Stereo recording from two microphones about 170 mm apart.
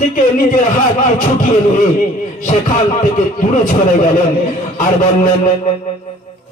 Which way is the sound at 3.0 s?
50° left (ahead or behind).